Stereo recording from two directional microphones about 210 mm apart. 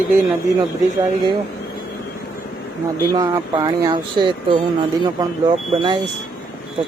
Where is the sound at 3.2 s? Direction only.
20° right (ahead or behind).